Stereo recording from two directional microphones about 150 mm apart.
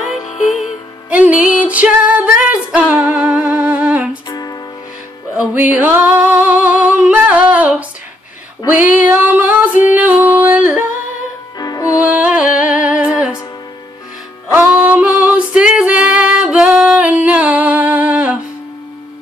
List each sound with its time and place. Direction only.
0.1 s music: 50° left (ahead or behind)
1.1 s music: 10° right (ahead or behind)
4.3 s music: 25° left (ahead or behind)
5.4 s female singing: 10° right (ahead or behind)
8.9 s music: 10° right (ahead or behind)
11.5 s music: 25° left (ahead or behind)
12.0 s music: 10° right (ahead or behind)
14.5 s female singing: 10° right (ahead or behind)